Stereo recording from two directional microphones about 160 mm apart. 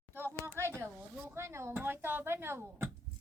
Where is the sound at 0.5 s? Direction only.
15° right (ahead or behind).